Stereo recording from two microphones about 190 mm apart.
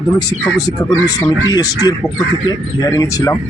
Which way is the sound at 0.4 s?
15° left (ahead or behind).